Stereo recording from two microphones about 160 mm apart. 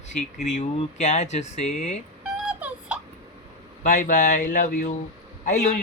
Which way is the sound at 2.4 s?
10° right (ahead or behind).